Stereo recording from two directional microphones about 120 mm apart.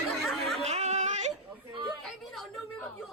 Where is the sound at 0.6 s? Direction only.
70° right (ahead or behind).